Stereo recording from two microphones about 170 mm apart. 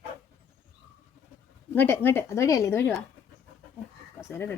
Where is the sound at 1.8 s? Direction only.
10° left (ahead or behind).